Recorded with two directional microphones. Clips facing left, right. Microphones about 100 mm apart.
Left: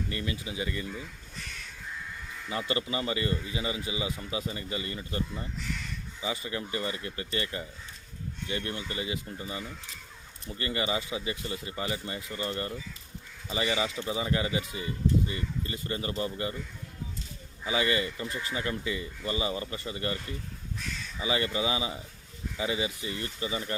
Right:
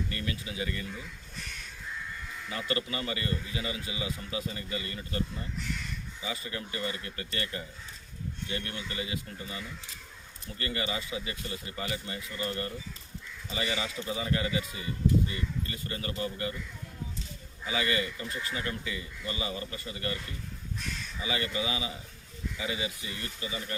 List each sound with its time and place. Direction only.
0.1 s a man's voice: 20° left (ahead or behind)
2.5 s a man's voice: 25° left (ahead or behind)
6.2 s a man's voice: 25° left (ahead or behind)
17.7 s a man's voice: 25° left (ahead or behind)
21.2 s a man's voice: 30° left (ahead or behind)